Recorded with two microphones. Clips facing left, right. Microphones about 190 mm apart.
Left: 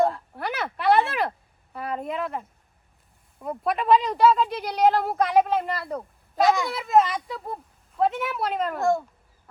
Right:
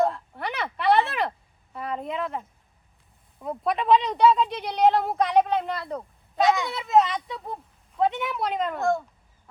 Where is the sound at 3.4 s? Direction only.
Centre (ahead or behind).